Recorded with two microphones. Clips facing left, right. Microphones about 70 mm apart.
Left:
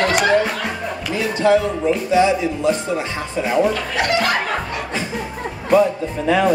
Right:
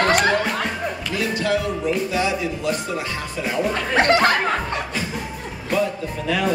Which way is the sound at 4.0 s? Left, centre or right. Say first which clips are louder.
Right 4 dB; right.